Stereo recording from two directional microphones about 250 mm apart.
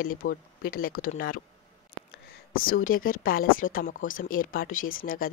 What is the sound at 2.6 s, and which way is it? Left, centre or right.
Speech, left.